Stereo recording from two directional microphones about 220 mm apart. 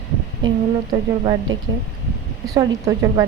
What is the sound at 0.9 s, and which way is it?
A woman's voice, 15° right (ahead or behind).